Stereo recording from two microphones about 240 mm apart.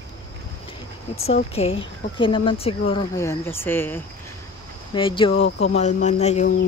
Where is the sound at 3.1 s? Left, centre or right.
Centre.